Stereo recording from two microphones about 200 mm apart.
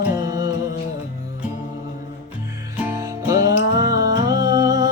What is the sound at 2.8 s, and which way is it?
Music, 15° right (ahead or behind).